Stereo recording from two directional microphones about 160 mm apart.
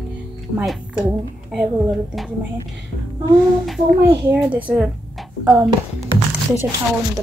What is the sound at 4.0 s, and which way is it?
A child's voice, 15° right (ahead or behind).